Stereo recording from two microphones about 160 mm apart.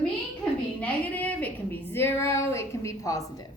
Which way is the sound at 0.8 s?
10° left (ahead or behind).